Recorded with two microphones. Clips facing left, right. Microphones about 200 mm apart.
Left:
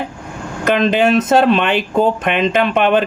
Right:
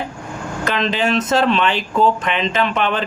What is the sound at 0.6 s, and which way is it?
Speech, 55° left (ahead or behind).